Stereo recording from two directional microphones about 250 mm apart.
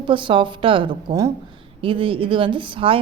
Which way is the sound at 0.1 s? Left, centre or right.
Centre.